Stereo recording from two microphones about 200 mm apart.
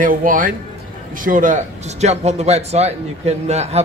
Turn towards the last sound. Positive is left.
turn(degrees=-35)  # may be behind; listen again after turning